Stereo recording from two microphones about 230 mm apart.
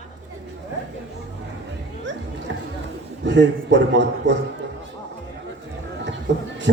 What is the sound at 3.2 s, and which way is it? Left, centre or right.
A woman's voice, right.